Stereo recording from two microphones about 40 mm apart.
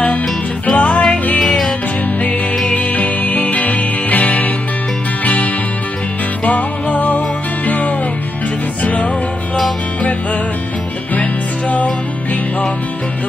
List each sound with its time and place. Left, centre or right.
0.7 s music: left
1.4 s music: centre
2.7 s music: left